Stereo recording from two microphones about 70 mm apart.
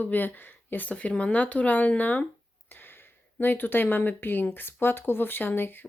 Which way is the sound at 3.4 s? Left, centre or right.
Left.